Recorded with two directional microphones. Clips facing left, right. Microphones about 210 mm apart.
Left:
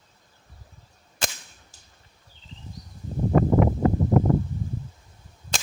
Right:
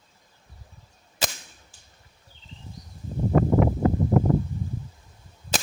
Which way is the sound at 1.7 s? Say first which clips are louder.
Left 1 dB; 40° left (ahead or behind).